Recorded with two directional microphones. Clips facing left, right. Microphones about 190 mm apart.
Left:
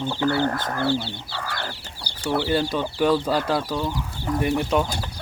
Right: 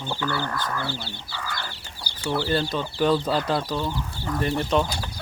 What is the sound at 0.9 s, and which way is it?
Speech, 25° left (ahead or behind).